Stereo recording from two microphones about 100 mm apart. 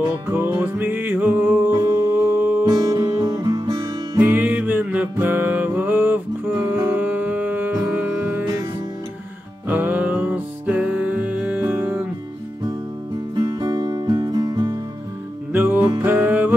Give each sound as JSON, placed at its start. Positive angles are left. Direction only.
{"t": 0.3, "sound": "music", "side_deg": -20}
{"t": 2.6, "sound": "music", "side_deg": -45}
{"t": 4.2, "sound": "music", "side_deg": -20}
{"t": 9.7, "sound": "music", "side_deg": -20}
{"t": 13.3, "sound": "music", "side_deg": -45}
{"t": 15.5, "sound": "music", "side_deg": -20}